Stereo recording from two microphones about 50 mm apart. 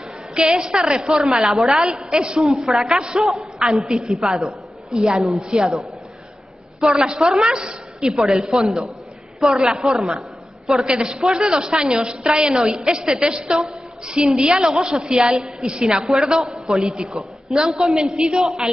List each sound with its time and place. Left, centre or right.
0.6 s a woman's voice: centre
1.9 s a woman's voice: centre
2.4 s a woman's voice: centre
6.8 s a woman's voice: centre
16.1 s a woman's voice: centre